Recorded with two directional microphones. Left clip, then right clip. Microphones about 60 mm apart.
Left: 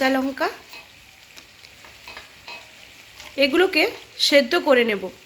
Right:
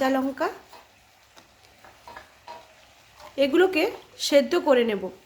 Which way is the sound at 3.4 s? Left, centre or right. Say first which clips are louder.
Left 3 dB; right.